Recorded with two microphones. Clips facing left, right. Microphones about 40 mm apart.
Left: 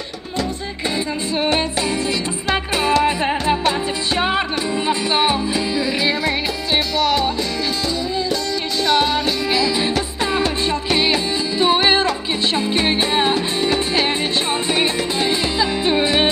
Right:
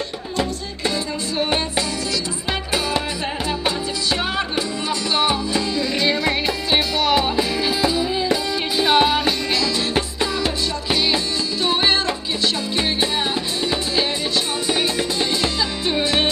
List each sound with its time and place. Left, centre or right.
4.8 s music: left
6.2 s music: centre
8.8 s music: centre
9.5 s music: centre
11.6 s music: centre